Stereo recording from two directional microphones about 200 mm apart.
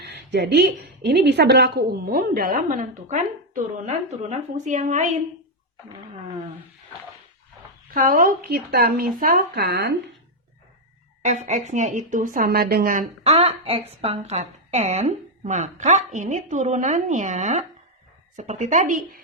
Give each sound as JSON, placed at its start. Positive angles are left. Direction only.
{"t": 0.0, "sound": "a woman's voice", "side_deg": -60}
{"t": 7.9, "sound": "a woman's voice", "side_deg": -45}
{"t": 11.2, "sound": "speech", "side_deg": -35}